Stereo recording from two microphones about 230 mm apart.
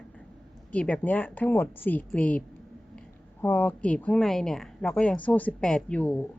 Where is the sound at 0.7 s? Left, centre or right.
Centre.